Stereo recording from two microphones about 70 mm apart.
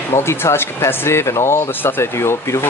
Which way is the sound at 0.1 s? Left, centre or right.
Left.